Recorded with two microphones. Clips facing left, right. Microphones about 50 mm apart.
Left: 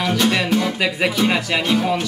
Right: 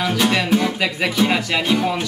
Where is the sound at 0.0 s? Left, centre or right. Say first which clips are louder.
Even; centre.